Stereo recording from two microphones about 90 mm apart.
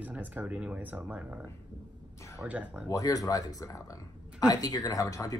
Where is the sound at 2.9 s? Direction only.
40° left (ahead or behind).